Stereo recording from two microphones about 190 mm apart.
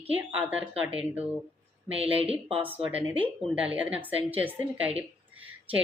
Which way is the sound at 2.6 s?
10° right (ahead or behind).